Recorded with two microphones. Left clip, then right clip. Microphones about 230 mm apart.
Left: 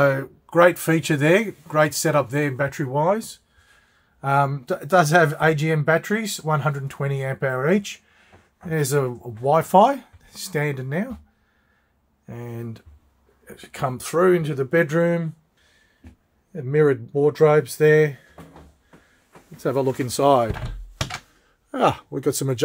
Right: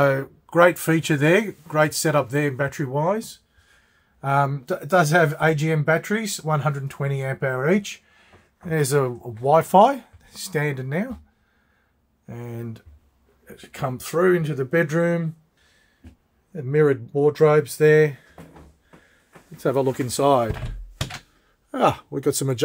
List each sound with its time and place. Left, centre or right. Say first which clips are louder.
0.0 s speech: even; centre
12.3 s speech: even; centre
13.5 s speech: left 2 dB; centre
16.5 s speech: even; centre
19.5 s speech: right 1 dB; centre
21.6 s speech: even; centre